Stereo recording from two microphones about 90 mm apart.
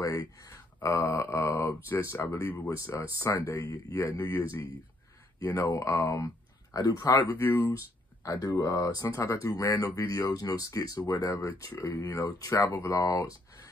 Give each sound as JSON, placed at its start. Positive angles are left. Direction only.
{"t": 0.0, "sound": "speech", "side_deg": 40}
{"t": 7.2, "sound": "speech", "side_deg": 25}
{"t": 7.7, "sound": "speech", "side_deg": 40}